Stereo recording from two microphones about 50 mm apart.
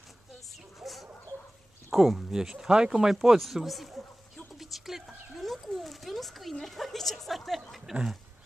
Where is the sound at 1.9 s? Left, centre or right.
Centre.